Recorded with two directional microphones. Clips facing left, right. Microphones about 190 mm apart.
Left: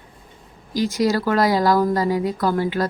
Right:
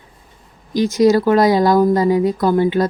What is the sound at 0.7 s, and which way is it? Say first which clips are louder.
Speech: right 7 dB; 20° right (ahead or behind).